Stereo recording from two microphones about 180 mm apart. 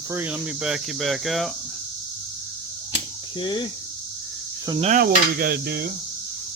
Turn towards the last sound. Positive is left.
turn(degrees=-55)  # may be behind; listen again after turning